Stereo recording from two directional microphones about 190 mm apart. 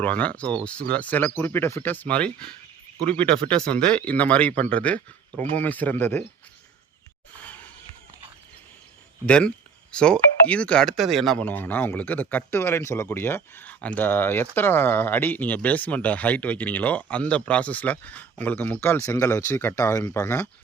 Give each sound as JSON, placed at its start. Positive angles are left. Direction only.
{"t": 0.0, "sound": "speech", "side_deg": 10}
{"t": 3.2, "sound": "speech", "side_deg": -30}
{"t": 3.5, "sound": "speech", "side_deg": 5}
{"t": 9.2, "sound": "speech", "side_deg": 5}